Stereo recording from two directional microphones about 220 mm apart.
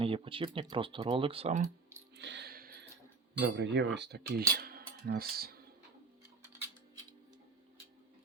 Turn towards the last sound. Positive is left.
turn(degrees=-15)  # may be behind; listen again after turning